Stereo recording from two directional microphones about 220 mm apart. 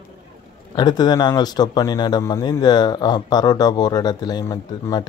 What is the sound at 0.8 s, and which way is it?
Speech, 20° left (ahead or behind).